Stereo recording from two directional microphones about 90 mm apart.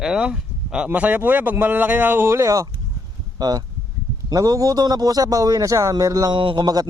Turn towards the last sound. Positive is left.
turn(degrees=-50)  # may be behind; listen again after turning